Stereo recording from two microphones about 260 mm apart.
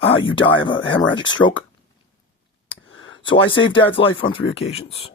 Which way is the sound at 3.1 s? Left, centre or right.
Centre.